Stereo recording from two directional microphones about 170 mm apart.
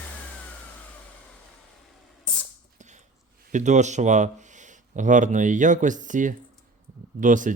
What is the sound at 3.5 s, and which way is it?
Speech, 45° right (ahead or behind).